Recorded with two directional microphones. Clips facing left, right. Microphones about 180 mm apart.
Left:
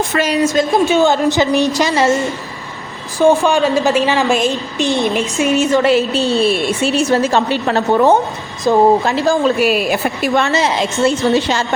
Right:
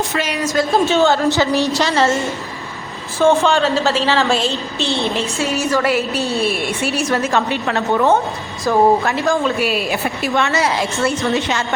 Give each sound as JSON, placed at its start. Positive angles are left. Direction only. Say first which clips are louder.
{"t": 0.1, "sound": "a woman's voice", "louder": "left 5 dB", "side_deg": 45}
{"t": 0.4, "sound": "a woman's voice", "louder": "even", "side_deg": 20}
{"t": 3.4, "sound": "a woman's voice", "louder": "left 2 dB", "side_deg": 15}
{"t": 10.4, "sound": "speech", "louder": "left 2 dB", "side_deg": 25}